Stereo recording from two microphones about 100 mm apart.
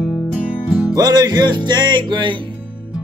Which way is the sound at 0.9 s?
40° right (ahead or behind).